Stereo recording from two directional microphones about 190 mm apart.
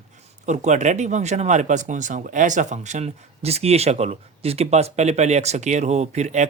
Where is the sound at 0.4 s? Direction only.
35° right (ahead or behind).